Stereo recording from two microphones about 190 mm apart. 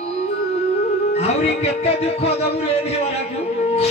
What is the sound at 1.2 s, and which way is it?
Music, 35° left (ahead or behind).